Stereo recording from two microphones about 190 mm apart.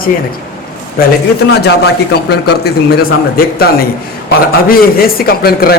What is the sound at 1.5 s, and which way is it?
A man's voice, 60° left (ahead or behind).